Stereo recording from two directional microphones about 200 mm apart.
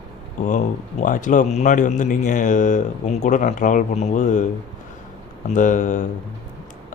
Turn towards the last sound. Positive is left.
turn(degrees=40)  # may be behind; listen again after turning